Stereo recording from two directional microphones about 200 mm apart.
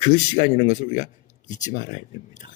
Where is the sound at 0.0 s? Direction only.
40° left (ahead or behind).